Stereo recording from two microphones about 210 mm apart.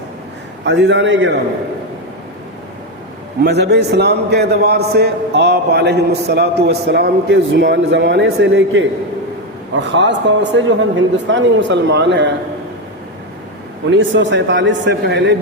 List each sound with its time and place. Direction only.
0.6 s a man's voice: 60° right (ahead or behind)
3.4 s a man's voice: 55° right (ahead or behind)
13.9 s a man's voice: 60° right (ahead or behind)